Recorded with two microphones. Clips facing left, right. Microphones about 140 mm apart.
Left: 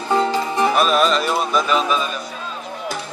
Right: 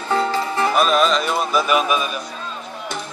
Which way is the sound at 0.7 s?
Centre (ahead or behind).